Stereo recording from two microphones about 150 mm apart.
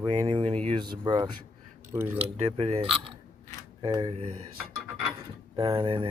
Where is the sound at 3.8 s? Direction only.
25° right (ahead or behind).